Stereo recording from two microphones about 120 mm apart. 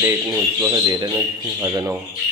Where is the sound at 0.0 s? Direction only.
20° right (ahead or behind).